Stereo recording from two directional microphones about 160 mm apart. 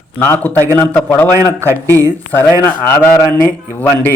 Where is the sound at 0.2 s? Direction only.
10° left (ahead or behind).